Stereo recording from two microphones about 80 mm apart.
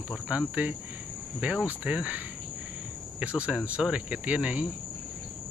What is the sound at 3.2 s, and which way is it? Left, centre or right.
Cricket, centre.